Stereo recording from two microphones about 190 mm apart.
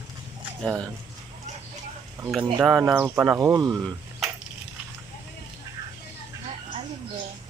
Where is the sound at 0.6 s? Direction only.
Centre (ahead or behind).